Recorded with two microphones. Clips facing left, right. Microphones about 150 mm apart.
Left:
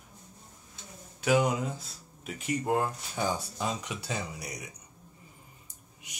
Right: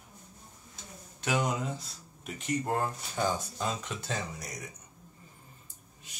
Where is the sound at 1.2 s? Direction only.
5° left (ahead or behind).